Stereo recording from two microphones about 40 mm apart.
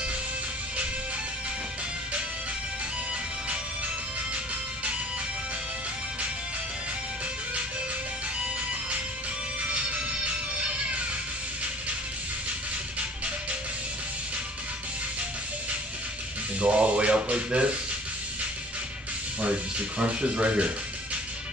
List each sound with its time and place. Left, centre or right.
16.5 s speech: right
19.4 s speech: right